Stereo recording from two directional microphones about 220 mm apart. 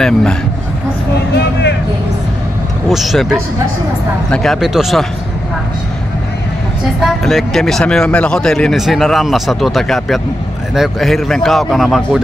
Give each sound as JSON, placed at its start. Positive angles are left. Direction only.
{"t": 0.0, "sound": "a man's voice", "side_deg": 5}
{"t": 1.1, "sound": "a sound", "side_deg": 50}
{"t": 2.9, "sound": "a man's voice", "side_deg": 0}
{"t": 7.0, "sound": "a man's voice", "side_deg": 0}